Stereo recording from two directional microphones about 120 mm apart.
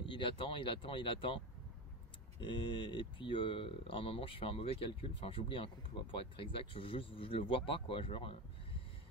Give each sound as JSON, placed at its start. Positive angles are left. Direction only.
{"t": 0.0, "sound": "speech", "side_deg": 45}
{"t": 2.4, "sound": "speech", "side_deg": 45}